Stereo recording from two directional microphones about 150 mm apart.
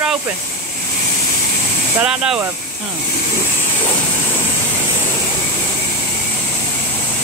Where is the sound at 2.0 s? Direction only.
5° right (ahead or behind).